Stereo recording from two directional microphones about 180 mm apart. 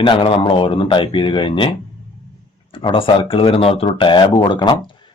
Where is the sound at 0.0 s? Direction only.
30° left (ahead or behind).